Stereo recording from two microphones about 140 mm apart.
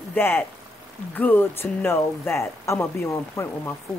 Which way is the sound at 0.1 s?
15° left (ahead or behind).